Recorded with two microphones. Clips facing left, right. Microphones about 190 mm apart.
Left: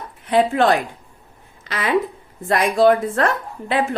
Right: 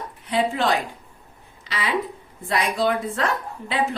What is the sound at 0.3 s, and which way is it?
A woman's voice, 55° left (ahead or behind).